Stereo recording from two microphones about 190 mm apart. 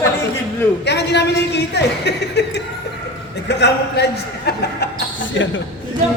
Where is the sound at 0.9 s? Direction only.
65° left (ahead or behind).